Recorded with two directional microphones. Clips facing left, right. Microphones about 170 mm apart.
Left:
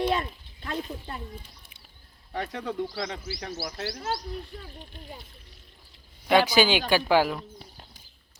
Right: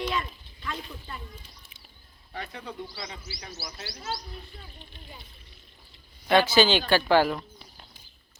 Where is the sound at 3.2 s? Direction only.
55° left (ahead or behind).